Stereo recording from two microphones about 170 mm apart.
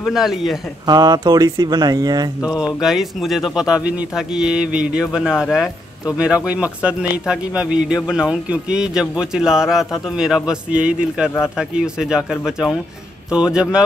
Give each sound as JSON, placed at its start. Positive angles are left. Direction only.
{"t": 0.0, "sound": "a man's voice", "side_deg": 0}
{"t": 0.8, "sound": "speech", "side_deg": -25}
{"t": 2.6, "sound": "a man's voice", "side_deg": 0}